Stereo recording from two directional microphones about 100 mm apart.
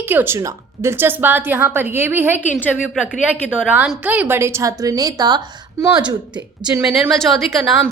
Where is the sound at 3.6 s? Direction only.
10° right (ahead or behind); by 5.4 s 40° right (ahead or behind).